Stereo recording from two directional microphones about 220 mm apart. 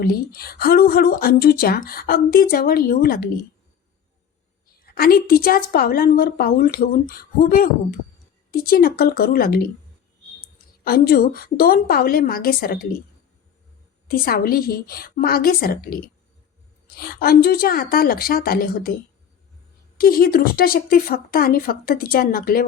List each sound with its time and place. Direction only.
0.0 s speech: 40° left (ahead or behind)
4.8 s a woman's voice: 45° left (ahead or behind)
10.8 s a woman's voice: 40° left (ahead or behind)
14.1 s speech: 40° left (ahead or behind)
20.0 s a woman's voice: 40° left (ahead or behind)